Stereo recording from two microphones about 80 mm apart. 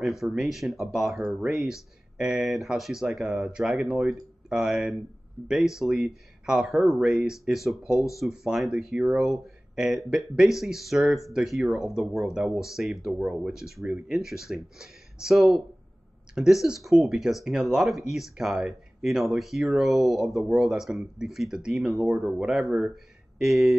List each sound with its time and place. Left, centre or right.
0.0 s speech: centre